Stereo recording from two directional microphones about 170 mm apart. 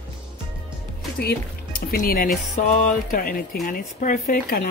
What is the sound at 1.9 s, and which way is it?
Speech, 60° left (ahead or behind).